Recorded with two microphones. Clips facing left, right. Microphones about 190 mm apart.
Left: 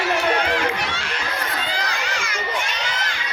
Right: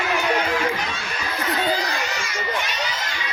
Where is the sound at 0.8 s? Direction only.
90° left.